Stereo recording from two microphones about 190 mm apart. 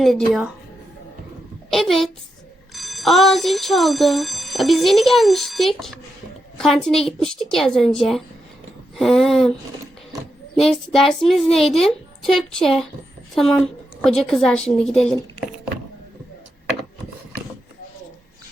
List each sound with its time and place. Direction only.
0.0 s speech: centre (ahead or behind)
1.7 s speech: centre (ahead or behind)
10.6 s speech: centre (ahead or behind)
14.0 s speech: centre (ahead or behind)